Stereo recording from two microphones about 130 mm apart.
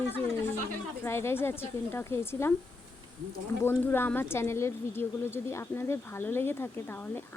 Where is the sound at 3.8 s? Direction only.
15° left (ahead or behind).